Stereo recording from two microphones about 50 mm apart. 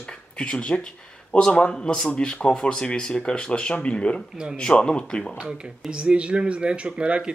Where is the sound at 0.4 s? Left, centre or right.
Centre.